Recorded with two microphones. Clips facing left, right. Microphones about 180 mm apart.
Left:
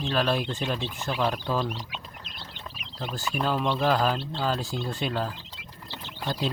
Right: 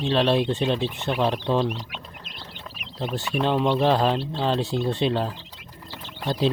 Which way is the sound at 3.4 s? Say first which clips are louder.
Right 4 dB; 25° right (ahead or behind).